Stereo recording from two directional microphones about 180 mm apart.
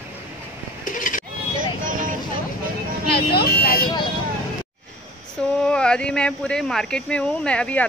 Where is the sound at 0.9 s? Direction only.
45° left (ahead or behind).